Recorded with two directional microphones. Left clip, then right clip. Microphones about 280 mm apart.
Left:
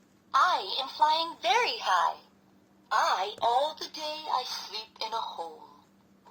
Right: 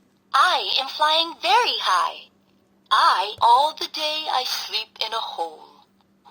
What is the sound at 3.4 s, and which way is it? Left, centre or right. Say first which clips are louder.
A woman's voice: right 10 dB; right.